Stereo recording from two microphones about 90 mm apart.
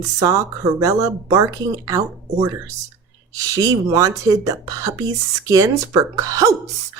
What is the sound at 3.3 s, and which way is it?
Speech, 40° right (ahead or behind).